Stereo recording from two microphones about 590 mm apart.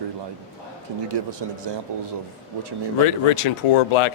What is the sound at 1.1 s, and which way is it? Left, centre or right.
Speech, right.